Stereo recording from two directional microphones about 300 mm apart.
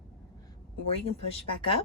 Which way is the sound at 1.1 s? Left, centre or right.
Centre.